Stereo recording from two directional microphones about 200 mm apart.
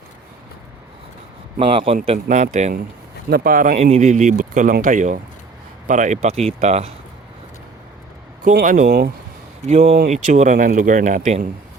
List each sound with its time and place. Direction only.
1.5 s speech: 25° right (ahead or behind)
2.1 s speech: 40° right (ahead or behind)
3.2 s speech: 50° right (ahead or behind); by 6.9 s 35° right (ahead or behind)
8.4 s speech: 45° right (ahead or behind)
9.6 s speech: 35° right (ahead or behind)